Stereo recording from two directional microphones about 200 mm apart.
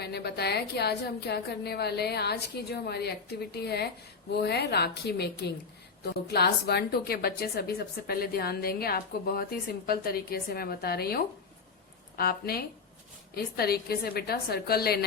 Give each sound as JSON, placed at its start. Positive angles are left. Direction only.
{"t": 0.0, "sound": "a woman's voice", "side_deg": 55}